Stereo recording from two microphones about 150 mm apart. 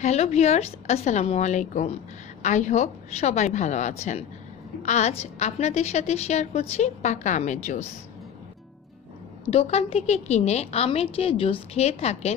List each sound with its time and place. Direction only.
0.0 s a woman's voice: 45° left (ahead or behind)
9.5 s a woman's voice: 45° left (ahead or behind)